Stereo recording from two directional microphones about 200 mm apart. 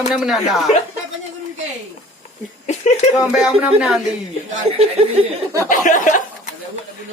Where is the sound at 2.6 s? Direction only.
35° left (ahead or behind).